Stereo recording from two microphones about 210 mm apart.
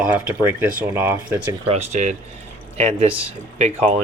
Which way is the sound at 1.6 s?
30° right (ahead or behind).